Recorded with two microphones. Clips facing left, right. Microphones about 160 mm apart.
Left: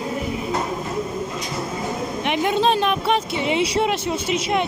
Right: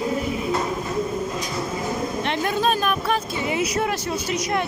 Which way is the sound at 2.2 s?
15° left (ahead or behind).